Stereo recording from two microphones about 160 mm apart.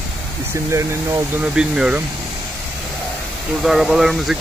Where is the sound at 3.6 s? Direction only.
Centre (ahead or behind).